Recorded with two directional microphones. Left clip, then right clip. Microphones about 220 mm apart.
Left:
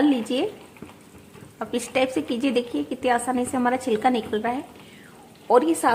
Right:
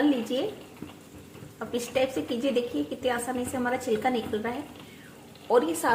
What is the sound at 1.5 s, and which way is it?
A woman's voice, 40° left (ahead or behind).